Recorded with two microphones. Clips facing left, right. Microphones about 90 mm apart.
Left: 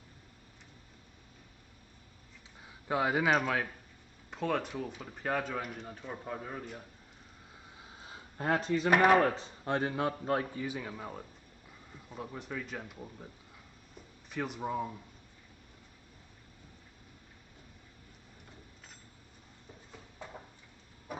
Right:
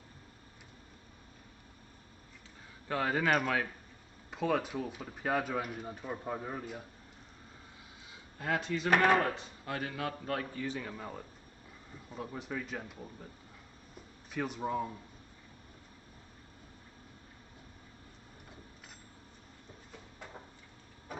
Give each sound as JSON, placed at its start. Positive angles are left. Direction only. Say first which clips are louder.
{"t": 2.9, "sound": "speech", "louder": "left 2 dB", "side_deg": 10}
{"t": 8.0, "sound": "a sound", "louder": "left 4 dB", "side_deg": 40}
{"t": 8.9, "sound": "speech", "louder": "left 2 dB", "side_deg": 10}
{"t": 9.3, "sound": "a man's voice", "louder": "left 6 dB", "side_deg": 30}
{"t": 10.6, "sound": "speech", "louder": "even", "side_deg": 10}
{"t": 13.9, "sound": "a sound", "louder": "even", "side_deg": 0}